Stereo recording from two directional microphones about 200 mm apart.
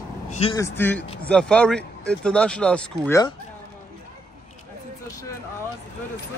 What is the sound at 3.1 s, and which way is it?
Speech, 20° left (ahead or behind).